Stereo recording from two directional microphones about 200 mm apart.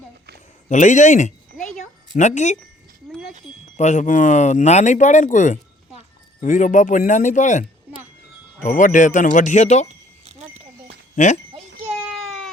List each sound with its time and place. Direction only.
0.7 s speech: 35° left (ahead or behind)
1.5 s a sound: 5° left (ahead or behind)
2.1 s speech: 35° left (ahead or behind)
3.8 s speech: 35° left (ahead or behind)
8.7 s speech: 40° left (ahead or behind)
10.2 s a sound: 30° right (ahead or behind)
11.1 s speech: 40° left (ahead or behind)